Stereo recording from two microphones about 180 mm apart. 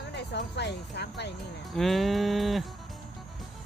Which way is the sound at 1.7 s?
Centre (ahead or behind).